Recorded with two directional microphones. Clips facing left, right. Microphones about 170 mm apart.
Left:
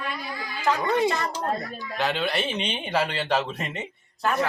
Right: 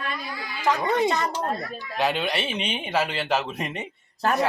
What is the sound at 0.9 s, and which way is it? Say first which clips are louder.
Speech: right 1 dB; 20° right (ahead or behind).